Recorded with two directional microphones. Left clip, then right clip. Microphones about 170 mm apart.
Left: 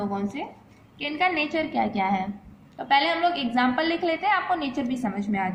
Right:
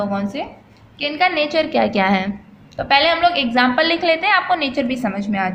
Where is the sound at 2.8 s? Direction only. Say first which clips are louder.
Right 7 dB; 25° right (ahead or behind).